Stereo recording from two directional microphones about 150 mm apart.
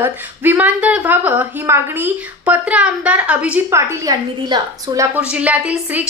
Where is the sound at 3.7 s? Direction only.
25° right (ahead or behind).